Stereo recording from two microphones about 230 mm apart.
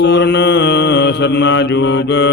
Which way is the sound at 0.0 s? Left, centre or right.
Left.